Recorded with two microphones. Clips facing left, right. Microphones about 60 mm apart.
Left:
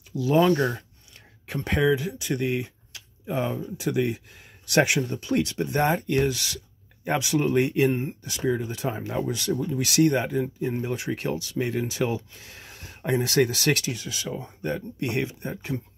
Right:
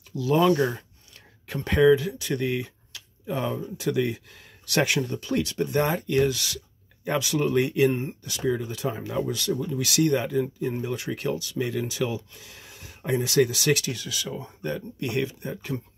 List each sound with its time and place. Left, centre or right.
0.1 s speech: centre
0.6 s speech: centre
1.1 s a sound: centre
2.0 s speech: centre; by 13.8 s left
13.8 s speech: left